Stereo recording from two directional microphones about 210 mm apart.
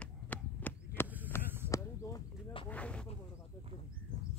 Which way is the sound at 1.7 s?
15° left (ahead or behind).